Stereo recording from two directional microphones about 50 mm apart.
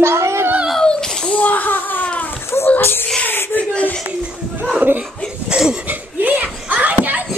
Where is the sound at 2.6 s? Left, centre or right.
Left.